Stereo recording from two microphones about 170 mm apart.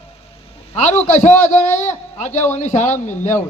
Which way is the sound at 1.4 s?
45° left (ahead or behind).